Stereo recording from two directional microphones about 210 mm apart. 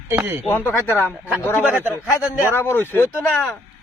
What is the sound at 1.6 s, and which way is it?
Speech, 5° right (ahead or behind).